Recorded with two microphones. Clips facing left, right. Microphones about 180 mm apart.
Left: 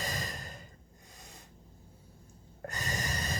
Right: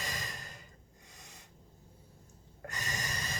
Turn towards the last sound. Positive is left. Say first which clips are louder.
# left 4 dB
turn(degrees=35)  # may be behind; listen again after turning